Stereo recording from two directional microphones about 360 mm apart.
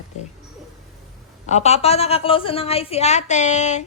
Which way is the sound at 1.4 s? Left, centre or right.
Centre.